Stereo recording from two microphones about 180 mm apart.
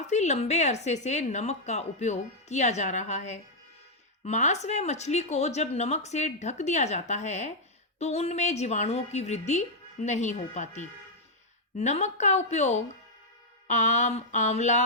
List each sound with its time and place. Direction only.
0.1 s speech: 40° left (ahead or behind)